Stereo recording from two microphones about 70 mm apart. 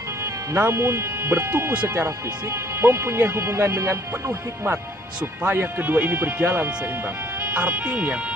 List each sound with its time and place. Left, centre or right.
0.2 s speech: right
1.7 s speech: right
2.0 s speech: right
5.4 s speech: right